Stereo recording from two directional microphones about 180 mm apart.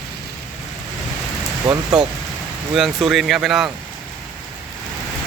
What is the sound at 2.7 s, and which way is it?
Speech, centre (ahead or behind).